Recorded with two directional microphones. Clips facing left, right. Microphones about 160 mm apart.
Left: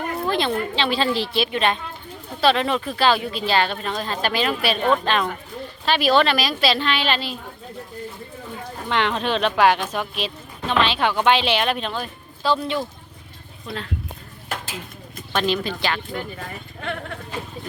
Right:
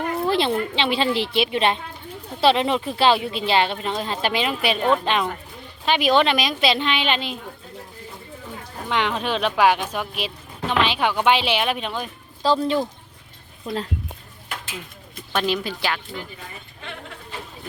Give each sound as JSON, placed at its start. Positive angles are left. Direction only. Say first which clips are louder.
{"t": 0.2, "sound": "speech", "louder": "right 1 dB", "side_deg": -25}
{"t": 8.9, "sound": "speech", "louder": "left 1 dB", "side_deg": -10}
{"t": 12.4, "sound": "a woman's voice", "louder": "right 2 dB", "side_deg": -35}
{"t": 14.5, "sound": "a sound", "louder": "left 3 dB", "side_deg": 45}
{"t": 15.3, "sound": "speech", "louder": "left 1 dB", "side_deg": -10}
{"t": 16.4, "sound": "speech", "louder": "left 6 dB", "side_deg": 65}